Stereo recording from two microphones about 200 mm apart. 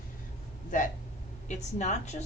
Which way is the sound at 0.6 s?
40° left (ahead or behind).